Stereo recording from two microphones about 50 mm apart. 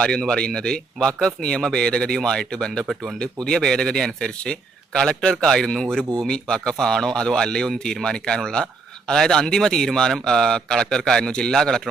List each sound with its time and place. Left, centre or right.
0.0 s speech: centre
2.8 s speech: centre
3.2 s speech: centre